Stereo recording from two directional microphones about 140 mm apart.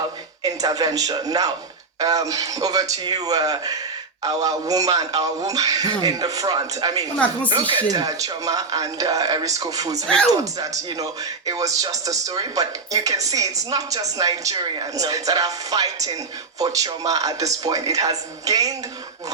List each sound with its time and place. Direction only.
0.4 s a man's voice: 25° right (ahead or behind)